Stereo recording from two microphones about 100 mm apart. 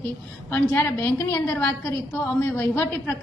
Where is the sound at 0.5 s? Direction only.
25° left (ahead or behind).